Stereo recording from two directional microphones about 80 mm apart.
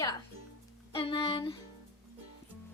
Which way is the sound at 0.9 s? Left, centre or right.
Left.